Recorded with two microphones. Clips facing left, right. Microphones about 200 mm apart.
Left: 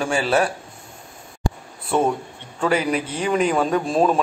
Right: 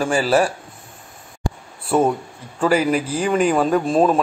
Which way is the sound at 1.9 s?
5° right (ahead or behind).